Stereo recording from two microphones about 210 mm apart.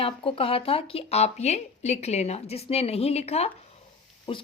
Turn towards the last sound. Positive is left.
turn(degrees=25)  # may be behind; listen again after turning